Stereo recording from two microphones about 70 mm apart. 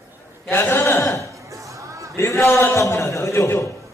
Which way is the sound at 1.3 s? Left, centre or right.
Right.